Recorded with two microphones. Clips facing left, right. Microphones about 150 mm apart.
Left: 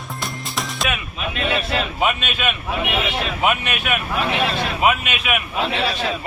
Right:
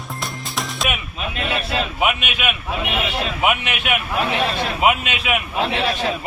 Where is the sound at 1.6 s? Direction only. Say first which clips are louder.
Even; 10° right (ahead or behind).